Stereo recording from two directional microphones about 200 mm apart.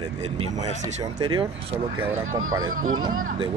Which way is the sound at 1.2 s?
25° right (ahead or behind).